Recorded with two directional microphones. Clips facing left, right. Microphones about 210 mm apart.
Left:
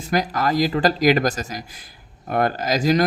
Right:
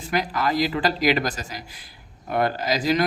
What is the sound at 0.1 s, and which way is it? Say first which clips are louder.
Speech: left 3 dB; 40° left (ahead or behind).